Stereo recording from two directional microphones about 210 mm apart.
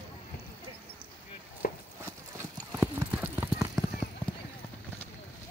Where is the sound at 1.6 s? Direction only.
45° left (ahead or behind).